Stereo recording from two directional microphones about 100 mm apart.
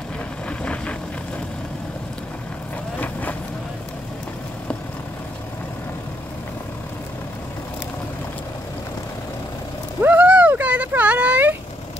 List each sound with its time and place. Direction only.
0.5 s vehicle: 10° left (ahead or behind)
3.0 s vehicle: 15° left (ahead or behind)
10.0 s a sound: 15° right (ahead or behind)